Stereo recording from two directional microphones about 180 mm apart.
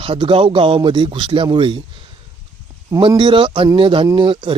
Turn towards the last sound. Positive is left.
turn(degrees=-25)  # may be behind; listen again after turning